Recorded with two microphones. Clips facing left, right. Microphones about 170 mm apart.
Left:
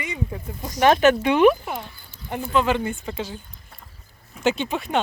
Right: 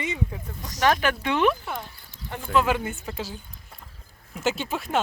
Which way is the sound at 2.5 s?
5° right (ahead or behind).